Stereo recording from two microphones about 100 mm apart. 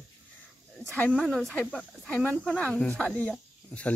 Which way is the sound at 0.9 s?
15° left (ahead or behind).